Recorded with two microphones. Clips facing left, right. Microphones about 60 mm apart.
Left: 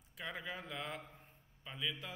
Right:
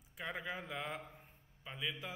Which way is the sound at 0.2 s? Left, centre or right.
Centre.